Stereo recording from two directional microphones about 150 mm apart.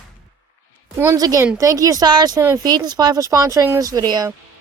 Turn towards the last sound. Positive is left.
turn(degrees=-25)  # may be behind; listen again after turning